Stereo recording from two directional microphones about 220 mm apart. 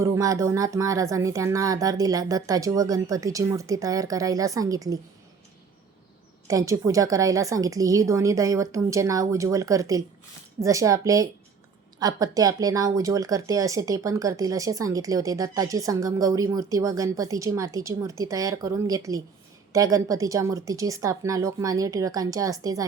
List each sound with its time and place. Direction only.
0.0 s speech: 15° right (ahead or behind)
6.5 s speech: 15° right (ahead or behind)